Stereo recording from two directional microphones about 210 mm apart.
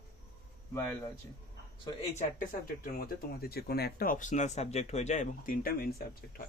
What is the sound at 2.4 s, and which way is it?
Speech, 40° left (ahead or behind).